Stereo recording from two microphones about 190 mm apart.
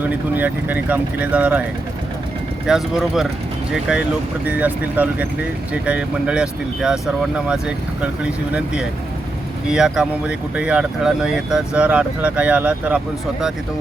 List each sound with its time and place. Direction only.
0.1 s speech: 10° right (ahead or behind)
2.6 s speech: centre (ahead or behind)